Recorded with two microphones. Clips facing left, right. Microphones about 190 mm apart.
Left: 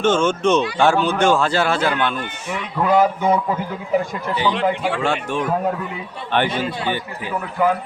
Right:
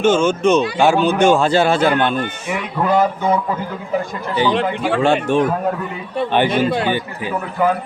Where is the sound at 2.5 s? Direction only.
5° right (ahead or behind).